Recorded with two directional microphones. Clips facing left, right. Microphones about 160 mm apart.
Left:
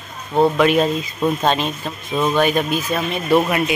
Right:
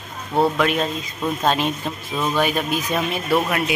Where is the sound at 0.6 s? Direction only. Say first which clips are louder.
Left 5 dB; 5° left (ahead or behind).